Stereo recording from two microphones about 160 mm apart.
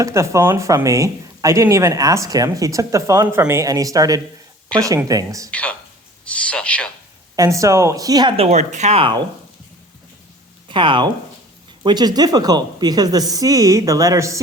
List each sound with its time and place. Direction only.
0.0 s speech: 20° right (ahead or behind)
4.7 s speech: 5° left (ahead or behind)
5.0 s speech: 20° right (ahead or behind)
5.5 s speech: 5° left (ahead or behind)
6.2 s a sound: 5° left (ahead or behind)
7.3 s speech: 20° right (ahead or behind)
8.4 s speech: 45° right (ahead or behind)
10.7 s speech: 30° right (ahead or behind)